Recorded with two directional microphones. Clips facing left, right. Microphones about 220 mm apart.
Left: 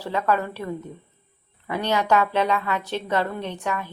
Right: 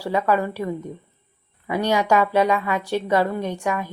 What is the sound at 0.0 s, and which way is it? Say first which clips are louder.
A woman's voice: right 3 dB; 10° right (ahead or behind).